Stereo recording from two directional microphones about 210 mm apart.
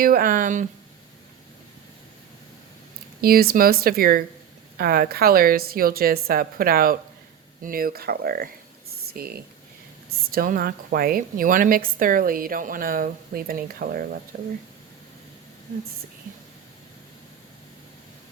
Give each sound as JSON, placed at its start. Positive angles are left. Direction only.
{"t": 0.0, "sound": "speech", "side_deg": -45}
{"t": 3.2, "sound": "a woman's voice", "side_deg": -45}